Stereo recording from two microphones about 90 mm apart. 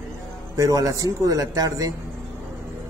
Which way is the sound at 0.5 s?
40° right (ahead or behind).